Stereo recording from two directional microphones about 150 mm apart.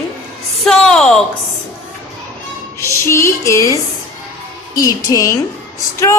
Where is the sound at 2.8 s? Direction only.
20° left (ahead or behind).